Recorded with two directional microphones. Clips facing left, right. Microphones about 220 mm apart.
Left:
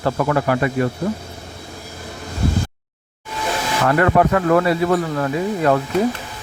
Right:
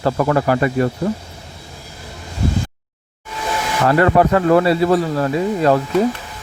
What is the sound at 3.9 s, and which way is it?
Speech, 30° right (ahead or behind).